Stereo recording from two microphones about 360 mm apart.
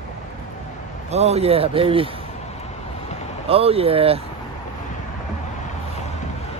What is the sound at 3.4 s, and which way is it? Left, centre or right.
Speech, centre.